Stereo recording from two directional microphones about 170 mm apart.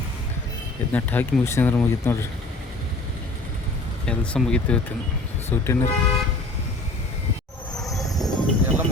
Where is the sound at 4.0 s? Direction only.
5° left (ahead or behind).